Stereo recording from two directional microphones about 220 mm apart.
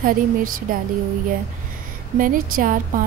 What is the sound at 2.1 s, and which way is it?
Speech, 40° right (ahead or behind).